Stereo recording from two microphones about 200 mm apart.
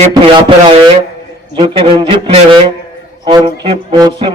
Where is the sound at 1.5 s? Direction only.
30° right (ahead or behind).